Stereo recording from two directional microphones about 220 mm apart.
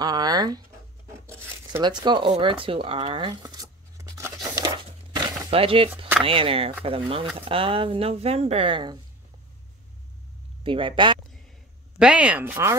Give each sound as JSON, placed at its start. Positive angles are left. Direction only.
{"t": 0.0, "sound": "speech", "side_deg": -20}
{"t": 1.2, "sound": "a sound", "side_deg": -10}
{"t": 6.2, "sound": "speech", "side_deg": -25}
{"t": 10.6, "sound": "speech", "side_deg": -25}
{"t": 12.0, "sound": "speech", "side_deg": -5}